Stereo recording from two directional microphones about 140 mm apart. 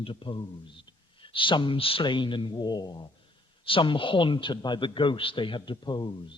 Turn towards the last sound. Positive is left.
turn(degrees=30)  # may be behind; listen again after turning